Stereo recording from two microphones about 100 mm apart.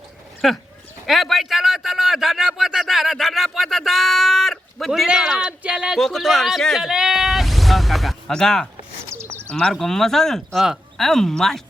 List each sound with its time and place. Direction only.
0.4 s speech: centre (ahead or behind)
1.0 s a sound: centre (ahead or behind)
6.0 s speech: 5° left (ahead or behind)
9.0 s bird: 25° right (ahead or behind)
9.5 s speech: 10° left (ahead or behind)